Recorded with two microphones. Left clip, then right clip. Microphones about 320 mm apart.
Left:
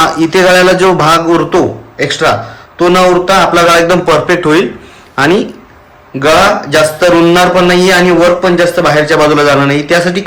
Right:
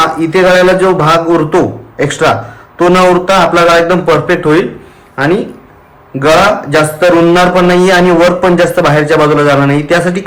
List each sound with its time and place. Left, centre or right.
0.2 s a man's voice: centre